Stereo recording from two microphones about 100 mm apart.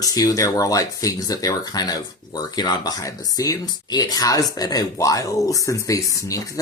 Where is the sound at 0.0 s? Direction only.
40° left (ahead or behind).